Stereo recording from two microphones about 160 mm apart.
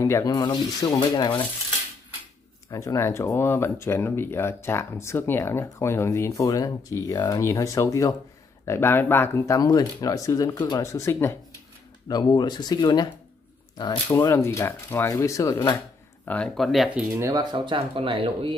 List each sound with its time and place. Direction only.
0.0 s speech: 20° left (ahead or behind)
2.7 s speech: 20° left (ahead or behind)
16.3 s speech: 5° left (ahead or behind)
17.1 s speech: 20° right (ahead or behind)